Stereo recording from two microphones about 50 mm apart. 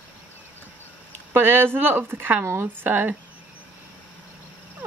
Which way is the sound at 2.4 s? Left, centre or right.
Right.